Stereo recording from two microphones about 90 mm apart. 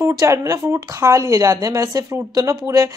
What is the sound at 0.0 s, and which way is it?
A woman's voice, 35° right (ahead or behind).